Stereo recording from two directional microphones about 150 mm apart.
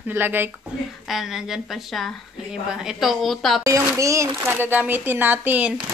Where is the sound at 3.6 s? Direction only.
20° right (ahead or behind).